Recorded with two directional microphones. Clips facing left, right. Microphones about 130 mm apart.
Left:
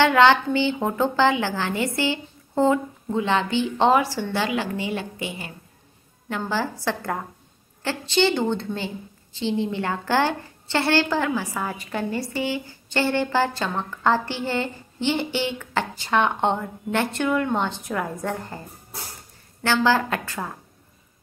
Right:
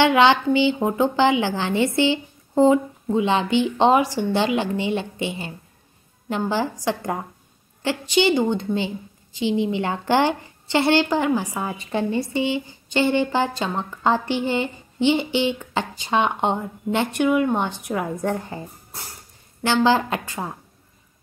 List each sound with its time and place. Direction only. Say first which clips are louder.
0.0 s a woman's voice: right 1 dB; 15° right (ahead or behind)
19.6 s a woman's voice: right 2 dB; 20° right (ahead or behind)